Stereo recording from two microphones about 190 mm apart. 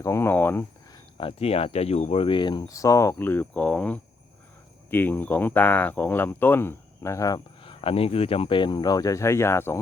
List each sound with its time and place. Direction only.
0.0 s speech: 15° left (ahead or behind)
1.2 s speech: 30° left (ahead or behind); by 9.8 s 15° left (ahead or behind)